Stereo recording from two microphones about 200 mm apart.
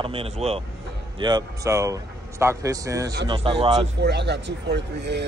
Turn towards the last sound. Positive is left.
turn(degrees=-60)  # may be behind; listen again after turning